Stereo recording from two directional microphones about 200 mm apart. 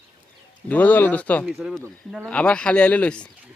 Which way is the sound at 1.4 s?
5° right (ahead or behind).